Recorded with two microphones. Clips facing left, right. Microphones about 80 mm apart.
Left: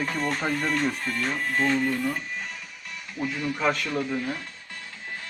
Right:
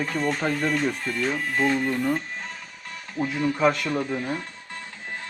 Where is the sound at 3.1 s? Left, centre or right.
Right.